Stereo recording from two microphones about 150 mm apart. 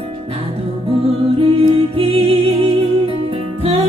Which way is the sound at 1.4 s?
40° right (ahead or behind).